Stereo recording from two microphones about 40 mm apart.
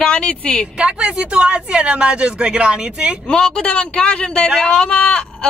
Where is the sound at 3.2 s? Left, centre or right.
Left.